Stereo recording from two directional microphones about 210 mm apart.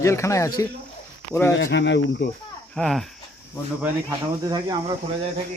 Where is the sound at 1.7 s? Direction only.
55° left (ahead or behind).